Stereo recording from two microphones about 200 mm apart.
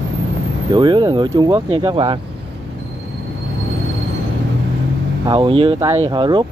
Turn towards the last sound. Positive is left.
turn(degrees=-25)  # may be behind; listen again after turning